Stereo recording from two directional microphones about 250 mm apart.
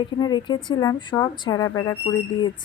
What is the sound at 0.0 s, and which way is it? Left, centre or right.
Speech, centre.